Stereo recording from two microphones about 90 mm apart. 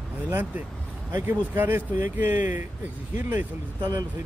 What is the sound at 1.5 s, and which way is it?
Speech, 20° right (ahead or behind).